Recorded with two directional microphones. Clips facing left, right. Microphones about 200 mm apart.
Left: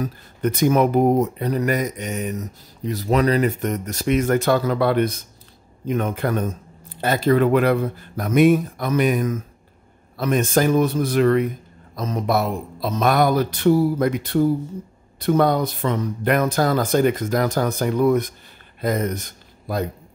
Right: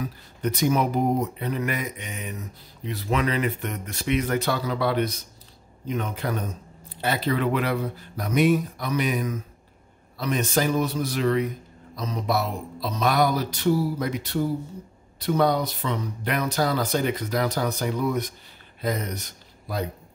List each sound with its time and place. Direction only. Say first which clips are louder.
0.0 s speech: left 5 dB; 55° left (ahead or behind)